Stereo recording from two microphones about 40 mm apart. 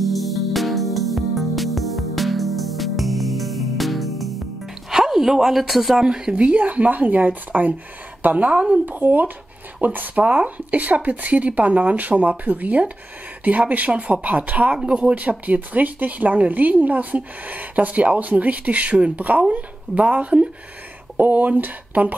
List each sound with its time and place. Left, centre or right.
0.0 s music: centre
4.9 s speech: centre
6.0 s speech: right
6.3 s speech: right